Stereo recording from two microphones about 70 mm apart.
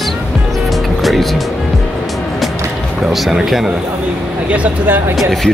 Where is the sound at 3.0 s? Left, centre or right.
Centre.